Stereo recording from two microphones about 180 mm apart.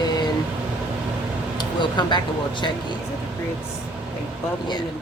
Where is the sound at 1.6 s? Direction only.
25° left (ahead or behind).